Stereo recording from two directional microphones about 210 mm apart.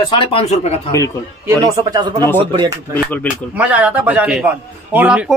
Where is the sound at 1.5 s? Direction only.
20° right (ahead or behind).